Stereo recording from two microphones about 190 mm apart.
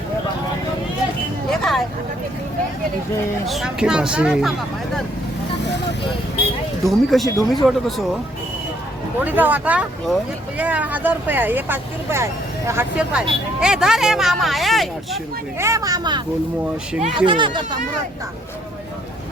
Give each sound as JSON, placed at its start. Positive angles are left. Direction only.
{"t": 1.5, "sound": "vehicle", "side_deg": 0}
{"t": 3.4, "sound": "speech", "side_deg": 0}
{"t": 6.8, "sound": "speech", "side_deg": 0}
{"t": 9.2, "sound": "speech", "side_deg": -10}
{"t": 15.5, "sound": "speech", "side_deg": -15}